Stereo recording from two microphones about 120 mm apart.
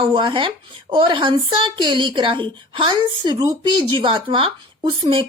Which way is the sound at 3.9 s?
50° right (ahead or behind).